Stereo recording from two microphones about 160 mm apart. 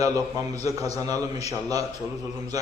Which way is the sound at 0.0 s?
20° right (ahead or behind).